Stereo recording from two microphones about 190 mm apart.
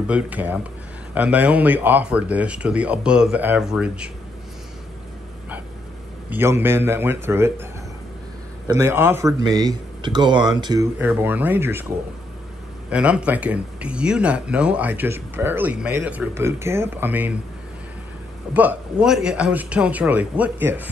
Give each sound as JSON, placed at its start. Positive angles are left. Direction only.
{"t": 0.0, "sound": "speech", "side_deg": -10}
{"t": 6.3, "sound": "speech", "side_deg": -10}
{"t": 8.6, "sound": "speech", "side_deg": -15}
{"t": 11.0, "sound": "speech", "side_deg": -10}
{"t": 12.9, "sound": "speech", "side_deg": -5}
{"t": 18.5, "sound": "speech", "side_deg": -10}